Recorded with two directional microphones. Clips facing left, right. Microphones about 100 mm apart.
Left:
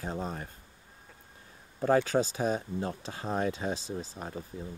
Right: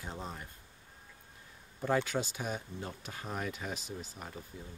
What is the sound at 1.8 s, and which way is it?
Speech, 35° left (ahead or behind).